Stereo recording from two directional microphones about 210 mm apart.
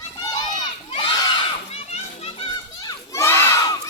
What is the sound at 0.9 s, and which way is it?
Crowd, 20° left (ahead or behind).